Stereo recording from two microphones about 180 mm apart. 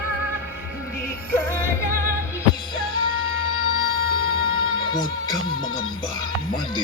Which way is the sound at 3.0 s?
30° left (ahead or behind).